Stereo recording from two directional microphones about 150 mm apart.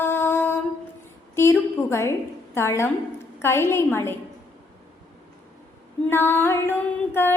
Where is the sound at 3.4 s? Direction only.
15° left (ahead or behind).